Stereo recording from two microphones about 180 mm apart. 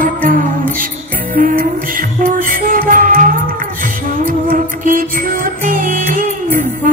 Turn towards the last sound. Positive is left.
turn(degrees=-50)  # may be behind; listen again after turning